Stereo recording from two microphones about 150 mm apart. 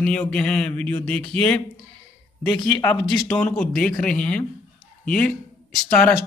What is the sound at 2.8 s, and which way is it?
Speech, 20° left (ahead or behind).